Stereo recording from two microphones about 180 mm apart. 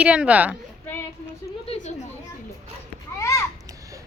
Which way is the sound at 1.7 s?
40° left (ahead or behind).